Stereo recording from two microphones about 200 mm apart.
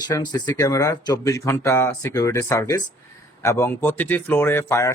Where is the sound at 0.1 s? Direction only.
20° left (ahead or behind).